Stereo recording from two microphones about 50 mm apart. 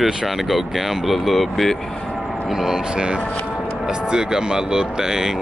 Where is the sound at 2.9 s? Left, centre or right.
Centre.